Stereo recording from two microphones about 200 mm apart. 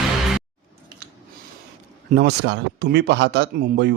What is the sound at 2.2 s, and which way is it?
Speech, 55° right (ahead or behind).